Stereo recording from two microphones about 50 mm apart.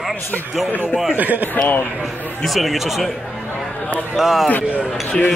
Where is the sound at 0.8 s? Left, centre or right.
Centre.